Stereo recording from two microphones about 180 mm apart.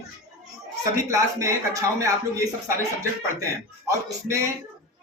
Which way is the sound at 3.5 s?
15° right (ahead or behind).